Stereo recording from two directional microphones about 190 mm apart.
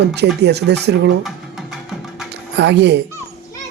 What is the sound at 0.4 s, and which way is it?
Speech, 60° right (ahead or behind).